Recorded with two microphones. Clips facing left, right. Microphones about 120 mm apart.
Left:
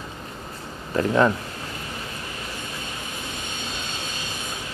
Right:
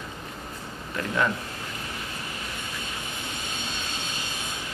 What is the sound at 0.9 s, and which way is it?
Speech, 40° left (ahead or behind).